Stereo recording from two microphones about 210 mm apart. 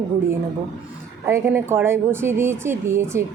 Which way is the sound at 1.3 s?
10° right (ahead or behind).